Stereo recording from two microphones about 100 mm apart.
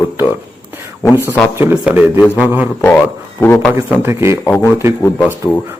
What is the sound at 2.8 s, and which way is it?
Speech, 20° left (ahead or behind).